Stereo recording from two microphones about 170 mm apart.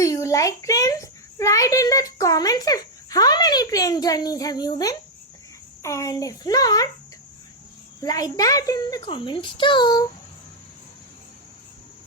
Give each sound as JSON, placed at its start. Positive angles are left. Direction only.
{"t": 0.0, "sound": "a child's voice", "side_deg": 20}
{"t": 8.0, "sound": "a child's voice", "side_deg": 20}